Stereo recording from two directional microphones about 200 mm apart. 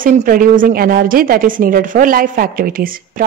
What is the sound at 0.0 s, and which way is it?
A woman's voice, 45° right (ahead or behind).